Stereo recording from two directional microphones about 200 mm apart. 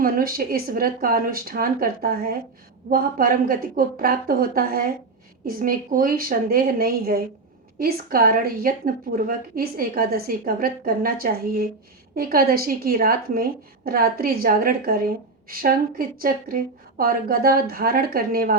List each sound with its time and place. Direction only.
0.0 s a woman's voice: 45° right (ahead or behind)